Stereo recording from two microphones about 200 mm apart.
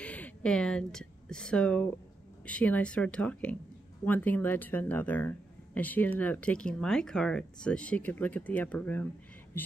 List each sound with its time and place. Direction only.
0.0 s a woman's voice: 5° left (ahead or behind)